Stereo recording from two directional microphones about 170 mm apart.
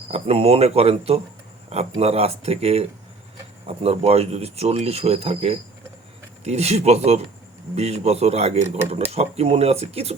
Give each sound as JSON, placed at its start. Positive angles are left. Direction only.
{"t": 0.1, "sound": "speech", "side_deg": -35}